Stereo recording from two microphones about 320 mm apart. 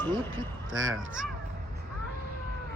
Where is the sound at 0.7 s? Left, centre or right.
Right.